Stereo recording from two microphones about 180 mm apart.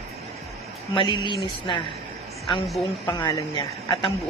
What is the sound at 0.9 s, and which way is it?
Speech, 25° left (ahead or behind).